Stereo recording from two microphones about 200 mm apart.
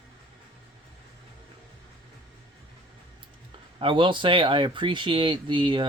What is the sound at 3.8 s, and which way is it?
Speech, 25° right (ahead or behind).